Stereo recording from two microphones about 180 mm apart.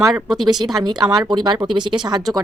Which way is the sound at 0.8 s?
20° right (ahead or behind).